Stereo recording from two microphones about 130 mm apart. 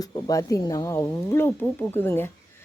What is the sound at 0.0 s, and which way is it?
Speech, 25° left (ahead or behind).